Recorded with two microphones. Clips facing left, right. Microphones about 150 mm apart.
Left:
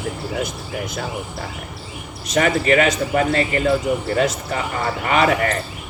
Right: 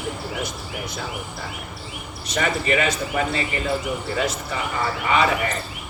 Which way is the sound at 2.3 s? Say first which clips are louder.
Left 6 dB; 55° left (ahead or behind).